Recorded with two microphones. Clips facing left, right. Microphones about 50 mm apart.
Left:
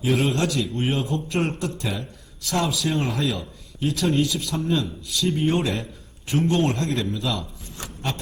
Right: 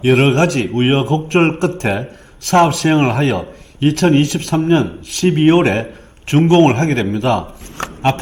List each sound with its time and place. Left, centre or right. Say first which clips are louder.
0.0 s a man's voice: right 10 dB; right